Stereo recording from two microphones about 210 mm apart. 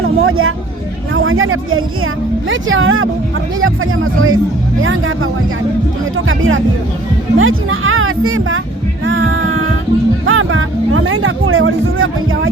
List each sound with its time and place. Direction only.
0.0 s a sound: 80° right
1.1 s speech: 75° right (ahead or behind)
6.1 s music: 70° right (ahead or behind)
7.3 s speech: 70° right (ahead or behind)
9.0 s music: 65° right (ahead or behind)